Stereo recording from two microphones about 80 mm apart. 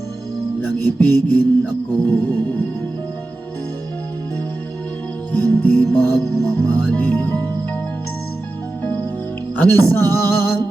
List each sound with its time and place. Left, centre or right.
0.6 s speech: left
5.3 s music: left
8.8 s music: left
9.6 s speech: left